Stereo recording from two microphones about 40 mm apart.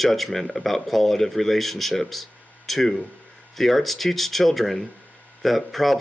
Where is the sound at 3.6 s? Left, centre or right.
Centre.